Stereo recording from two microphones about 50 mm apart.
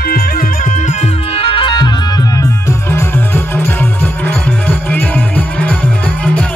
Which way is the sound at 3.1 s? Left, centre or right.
Left.